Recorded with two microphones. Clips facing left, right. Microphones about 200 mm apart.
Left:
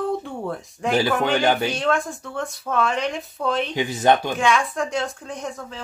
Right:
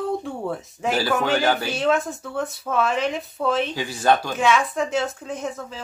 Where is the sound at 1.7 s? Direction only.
5° right (ahead or behind).